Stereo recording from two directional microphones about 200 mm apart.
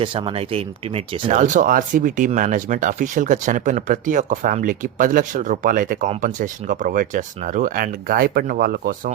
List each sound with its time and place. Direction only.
0.0 s speech: 25° right (ahead or behind); by 9.1 s 45° right (ahead or behind)